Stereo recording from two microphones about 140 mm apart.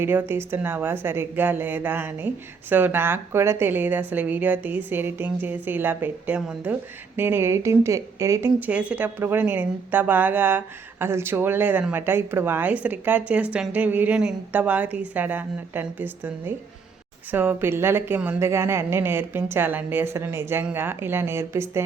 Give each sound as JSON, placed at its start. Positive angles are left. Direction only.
{"t": 0.0, "sound": "a woman's voice", "side_deg": -15}